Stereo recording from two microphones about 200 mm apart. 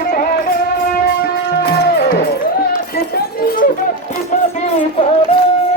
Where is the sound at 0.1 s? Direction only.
45° left (ahead or behind).